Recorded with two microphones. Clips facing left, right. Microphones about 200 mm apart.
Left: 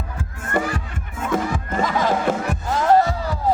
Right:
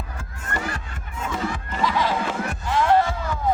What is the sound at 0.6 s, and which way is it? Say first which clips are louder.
Crowd: left 8 dB; 55° left (ahead or behind).